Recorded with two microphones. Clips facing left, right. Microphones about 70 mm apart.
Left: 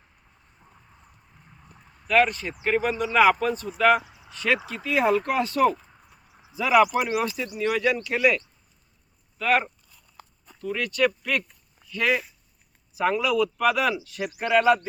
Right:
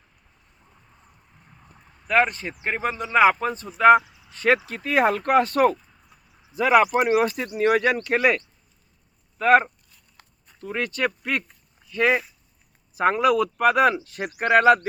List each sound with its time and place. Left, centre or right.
0.6 s boat: centre
2.0 s speech: right
4.0 s a sound: left
4.3 s a man's voice: right
8.0 s speech: right
9.4 s speech: right
12.9 s a man's voice: right